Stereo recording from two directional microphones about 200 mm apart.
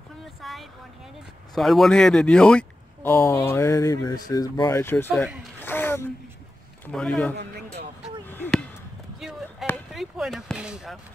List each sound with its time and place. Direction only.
0.2 s a sound: centre (ahead or behind)
1.5 s speech: centre (ahead or behind)
5.6 s gasp: 10° left (ahead or behind)
6.9 s a man's voice: 5° left (ahead or behind)
7.3 s speech: 55° right (ahead or behind)
8.3 s a sound: 10° left (ahead or behind)
9.9 s speech: centre (ahead or behind)